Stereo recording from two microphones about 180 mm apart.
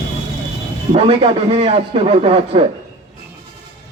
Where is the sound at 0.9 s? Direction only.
35° right (ahead or behind).